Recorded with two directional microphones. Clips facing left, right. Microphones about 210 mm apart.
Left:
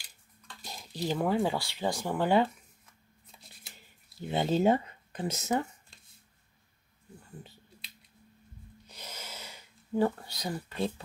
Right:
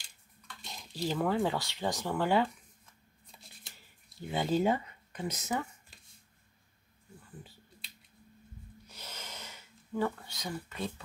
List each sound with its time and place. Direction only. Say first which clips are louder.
0.9 s speech: left 2 dB; 15° left (ahead or behind)
3.3 s shuffling cards: left 1 dB; centre (ahead or behind)
4.3 s speech: left 3 dB; 25° left (ahead or behind)
8.8 s rub: left 3 dB; 15° left (ahead or behind)
9.9 s speech: left 5 dB; 35° left (ahead or behind)